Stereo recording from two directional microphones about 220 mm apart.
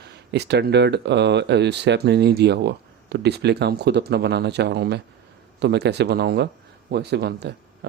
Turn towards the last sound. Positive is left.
turn(degrees=-50)  # may be behind; listen again after turning